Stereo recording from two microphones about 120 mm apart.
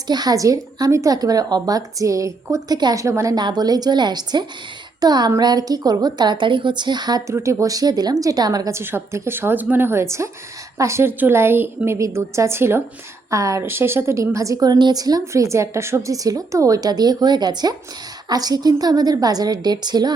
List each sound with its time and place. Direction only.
0.1 s speech: 35° right (ahead or behind)
3.4 s speech: 35° right (ahead or behind)
7.3 s a woman's voice: 25° right (ahead or behind)